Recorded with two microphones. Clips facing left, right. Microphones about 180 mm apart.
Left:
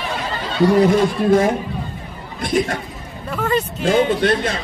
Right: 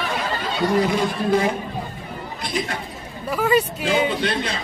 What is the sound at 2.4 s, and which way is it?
Speech, 50° left (ahead or behind).